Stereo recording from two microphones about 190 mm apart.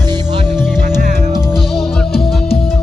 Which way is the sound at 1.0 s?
40° right (ahead or behind).